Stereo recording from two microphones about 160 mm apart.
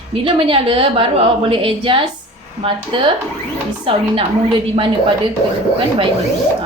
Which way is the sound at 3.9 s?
35° right (ahead or behind).